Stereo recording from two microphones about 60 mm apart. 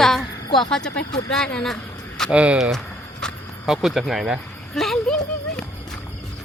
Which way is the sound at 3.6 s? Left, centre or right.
Centre.